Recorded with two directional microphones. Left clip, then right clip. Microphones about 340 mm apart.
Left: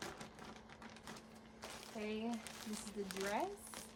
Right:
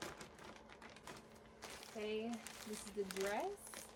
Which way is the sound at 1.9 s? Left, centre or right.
Left.